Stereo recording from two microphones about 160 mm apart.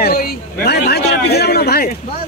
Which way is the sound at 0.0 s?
70° left (ahead or behind).